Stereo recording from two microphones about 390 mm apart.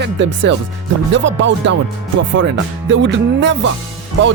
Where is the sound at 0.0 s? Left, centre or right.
Right.